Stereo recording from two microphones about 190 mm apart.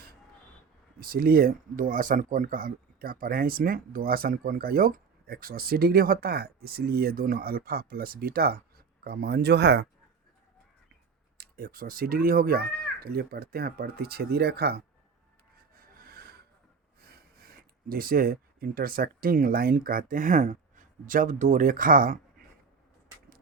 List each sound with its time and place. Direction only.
0.9 s speech: 50° right (ahead or behind)
11.3 s speech: 50° right (ahead or behind)
15.7 s a sound: 50° right (ahead or behind)
17.0 s speech: 55° right (ahead or behind)